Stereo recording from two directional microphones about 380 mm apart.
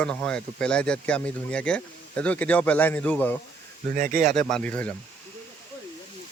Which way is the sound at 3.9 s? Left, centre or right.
Centre.